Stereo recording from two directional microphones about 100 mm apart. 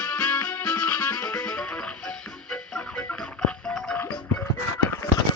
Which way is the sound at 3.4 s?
10° left (ahead or behind).